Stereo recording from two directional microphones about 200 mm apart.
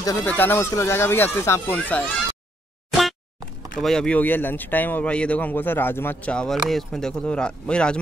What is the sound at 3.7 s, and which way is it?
Speech, 5° left (ahead or behind).